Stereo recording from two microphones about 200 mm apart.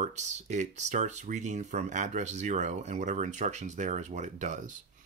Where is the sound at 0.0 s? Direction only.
35° right (ahead or behind).